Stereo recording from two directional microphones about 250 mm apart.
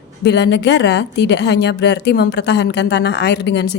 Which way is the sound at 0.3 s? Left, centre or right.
Left.